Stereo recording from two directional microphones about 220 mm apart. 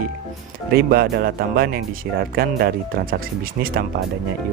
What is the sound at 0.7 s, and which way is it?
Speech, 45° right (ahead or behind).